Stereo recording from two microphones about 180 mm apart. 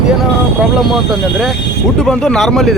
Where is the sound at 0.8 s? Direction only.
Centre (ahead or behind).